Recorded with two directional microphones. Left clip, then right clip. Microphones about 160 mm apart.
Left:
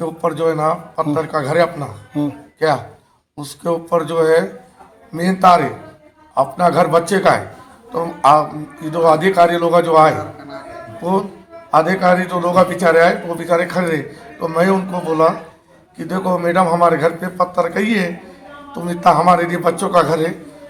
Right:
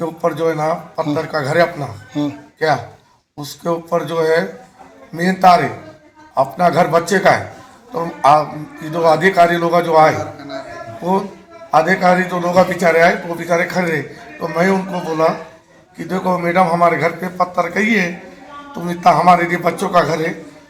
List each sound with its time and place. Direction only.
0.0 s a man's voice: 5° right (ahead or behind)
2.1 s speech: 15° left (ahead or behind)
2.6 s a man's voice: 5° right (ahead or behind)